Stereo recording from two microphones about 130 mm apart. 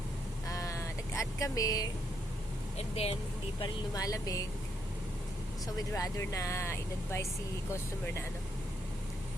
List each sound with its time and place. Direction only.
0.4 s a sound: 25° left (ahead or behind)
2.7 s speech: 50° left (ahead or behind)
3.9 s speech: 25° left (ahead or behind)
5.6 s speech: 25° left (ahead or behind)